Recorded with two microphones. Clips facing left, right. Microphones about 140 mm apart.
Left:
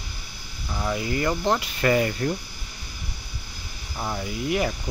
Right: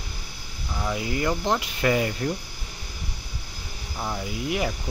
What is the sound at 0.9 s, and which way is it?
Speech, 10° right (ahead or behind).